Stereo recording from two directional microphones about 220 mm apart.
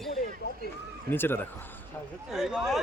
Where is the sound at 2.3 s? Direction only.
Centre (ahead or behind).